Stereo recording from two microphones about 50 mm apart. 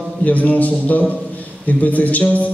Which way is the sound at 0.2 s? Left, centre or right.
Left.